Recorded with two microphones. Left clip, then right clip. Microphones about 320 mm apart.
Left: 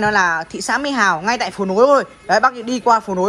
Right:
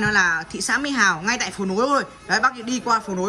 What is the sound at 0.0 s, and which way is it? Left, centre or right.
A man's voice, centre.